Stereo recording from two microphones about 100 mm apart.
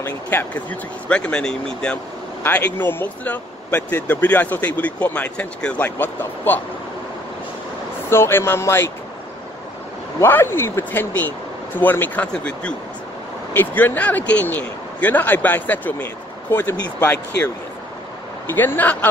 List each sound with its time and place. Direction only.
0.0 s speech: 20° left (ahead or behind)
8.1 s speech: 25° left (ahead or behind)
10.2 s speech: 25° left (ahead or behind)
18.5 s speech: 20° left (ahead or behind)